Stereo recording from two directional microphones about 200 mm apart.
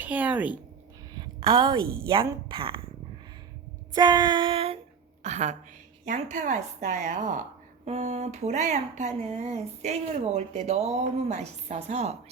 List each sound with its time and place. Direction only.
0.0 s speech: 10° right (ahead or behind)
1.1 s a woman's voice: 20° right (ahead or behind)
3.9 s a sound: 20° right (ahead or behind)
5.2 s speech: 35° right (ahead or behind)